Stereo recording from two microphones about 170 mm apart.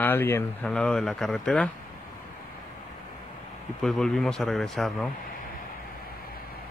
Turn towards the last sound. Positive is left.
turn(degrees=0)  # may be behind; listen again after turning